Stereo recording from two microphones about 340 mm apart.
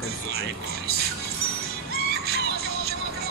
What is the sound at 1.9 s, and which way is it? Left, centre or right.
Music, right.